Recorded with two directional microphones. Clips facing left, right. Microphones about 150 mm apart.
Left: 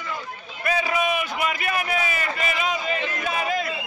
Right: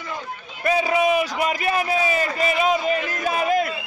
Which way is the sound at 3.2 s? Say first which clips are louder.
Right 7 dB; 45° right (ahead or behind).